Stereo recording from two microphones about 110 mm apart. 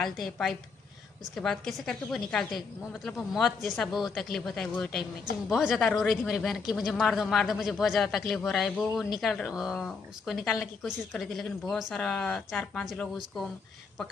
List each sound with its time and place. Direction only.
0.0 s a woman's voice: centre (ahead or behind)